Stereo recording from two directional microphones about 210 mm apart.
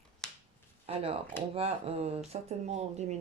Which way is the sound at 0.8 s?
30° right (ahead or behind).